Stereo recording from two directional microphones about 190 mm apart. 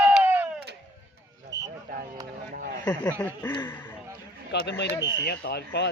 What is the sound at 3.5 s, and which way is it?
Speech, 20° left (ahead or behind).